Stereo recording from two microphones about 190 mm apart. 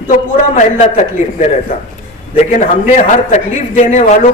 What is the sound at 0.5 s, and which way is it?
A man's voice, 40° left (ahead or behind).